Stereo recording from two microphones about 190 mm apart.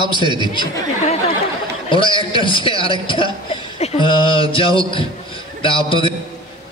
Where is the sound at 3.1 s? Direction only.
25° left (ahead or behind).